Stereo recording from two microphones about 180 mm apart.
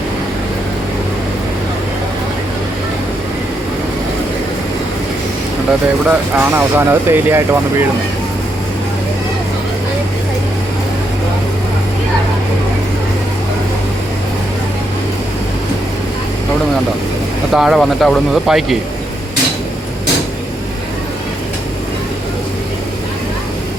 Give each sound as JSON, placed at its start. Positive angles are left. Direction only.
{"t": 6.1, "sound": "speech", "side_deg": -10}
{"t": 17.5, "sound": "speech", "side_deg": 0}